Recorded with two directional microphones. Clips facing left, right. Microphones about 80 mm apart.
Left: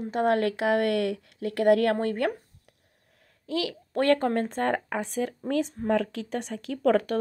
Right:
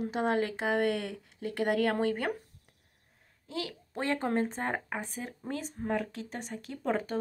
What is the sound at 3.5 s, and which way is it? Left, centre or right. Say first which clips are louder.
Speech: left 8 dB; left.